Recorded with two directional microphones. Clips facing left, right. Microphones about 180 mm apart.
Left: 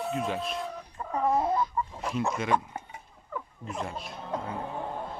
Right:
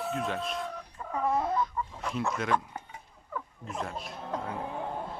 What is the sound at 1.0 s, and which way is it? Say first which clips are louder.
Chicken: left 3 dB; 40° left (ahead or behind).